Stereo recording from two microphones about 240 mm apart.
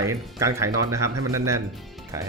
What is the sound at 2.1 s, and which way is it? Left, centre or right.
Speech, centre.